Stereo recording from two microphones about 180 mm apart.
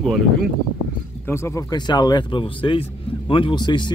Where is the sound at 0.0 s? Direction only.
Centre (ahead or behind).